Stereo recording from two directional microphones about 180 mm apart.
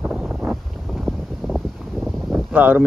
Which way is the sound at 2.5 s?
10° right (ahead or behind).